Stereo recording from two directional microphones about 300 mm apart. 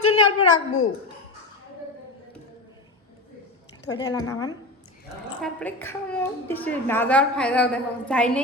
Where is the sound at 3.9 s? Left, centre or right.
Centre.